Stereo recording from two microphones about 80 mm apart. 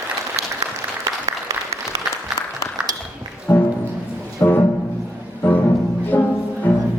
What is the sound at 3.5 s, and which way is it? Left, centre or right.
Music, left.